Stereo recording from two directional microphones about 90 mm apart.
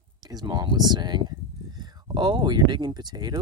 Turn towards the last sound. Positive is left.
turn(degrees=-50)  # may be behind; listen again after turning